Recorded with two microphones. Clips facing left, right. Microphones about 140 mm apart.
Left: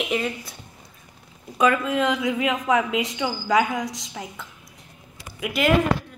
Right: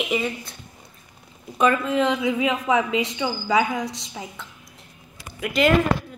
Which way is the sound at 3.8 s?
30° right (ahead or behind).